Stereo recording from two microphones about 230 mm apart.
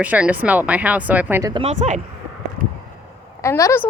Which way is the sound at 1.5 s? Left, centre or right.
Right.